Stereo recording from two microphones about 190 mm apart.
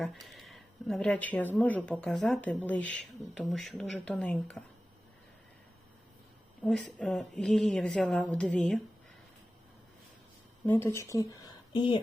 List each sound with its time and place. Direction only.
0.0 s speech: centre (ahead or behind)
6.7 s speech: centre (ahead or behind)
10.7 s speech: 15° left (ahead or behind)